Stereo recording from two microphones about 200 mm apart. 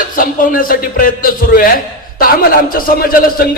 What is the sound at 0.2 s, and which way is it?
A man's voice, 45° left (ahead or behind).